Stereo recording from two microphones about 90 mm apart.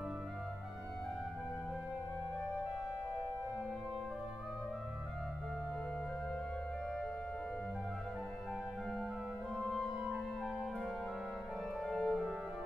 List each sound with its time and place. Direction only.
9.6 s music: centre (ahead or behind)
11.8 s music: 5° left (ahead or behind)